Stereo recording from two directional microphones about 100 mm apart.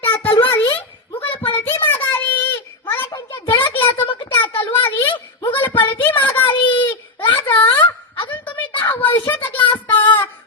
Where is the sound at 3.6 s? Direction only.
65° left (ahead or behind).